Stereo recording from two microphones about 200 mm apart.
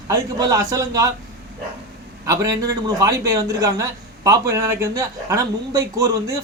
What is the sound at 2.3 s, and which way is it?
Speech, 15° right (ahead or behind).